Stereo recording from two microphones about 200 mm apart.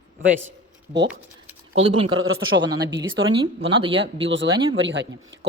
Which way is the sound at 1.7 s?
25° right (ahead or behind).